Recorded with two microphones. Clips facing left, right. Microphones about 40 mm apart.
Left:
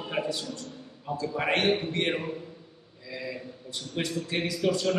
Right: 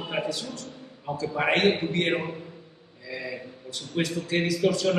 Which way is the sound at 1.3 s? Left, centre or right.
Right.